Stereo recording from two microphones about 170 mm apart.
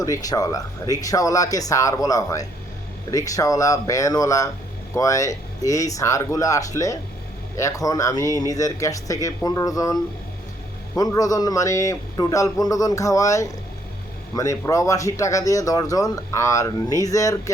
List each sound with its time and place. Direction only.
0.0 s speech: 20° left (ahead or behind)